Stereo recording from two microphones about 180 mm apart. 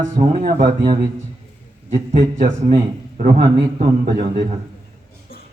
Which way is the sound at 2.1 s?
45° right (ahead or behind).